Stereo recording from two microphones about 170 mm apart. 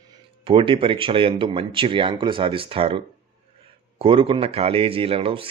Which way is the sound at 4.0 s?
30° right (ahead or behind).